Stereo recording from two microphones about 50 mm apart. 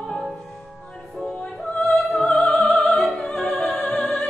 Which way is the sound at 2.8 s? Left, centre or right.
Left.